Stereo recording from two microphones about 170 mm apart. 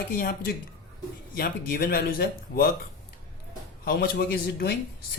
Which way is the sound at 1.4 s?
60° left (ahead or behind).